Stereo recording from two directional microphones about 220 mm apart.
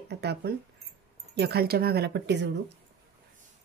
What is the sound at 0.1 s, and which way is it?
Speech, 50° right (ahead or behind).